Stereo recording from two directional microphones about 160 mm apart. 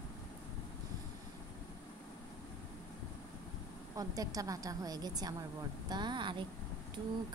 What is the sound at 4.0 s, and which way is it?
A woman's voice, 20° right (ahead or behind).